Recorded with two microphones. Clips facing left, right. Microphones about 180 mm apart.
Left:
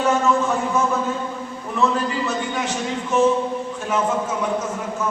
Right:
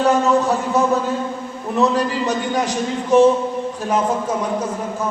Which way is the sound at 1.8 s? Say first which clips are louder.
Right 3 dB; 40° right (ahead or behind).